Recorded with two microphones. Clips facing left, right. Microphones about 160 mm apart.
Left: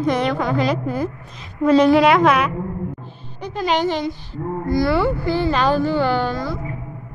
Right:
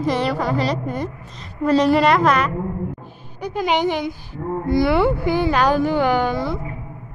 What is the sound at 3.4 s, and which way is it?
A woman's voice, 15° right (ahead or behind).